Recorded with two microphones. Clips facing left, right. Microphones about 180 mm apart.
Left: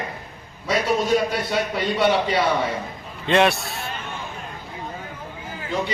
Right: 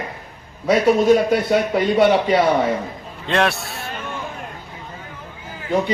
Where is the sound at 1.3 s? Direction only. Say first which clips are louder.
Right 7 dB; 50° right (ahead or behind).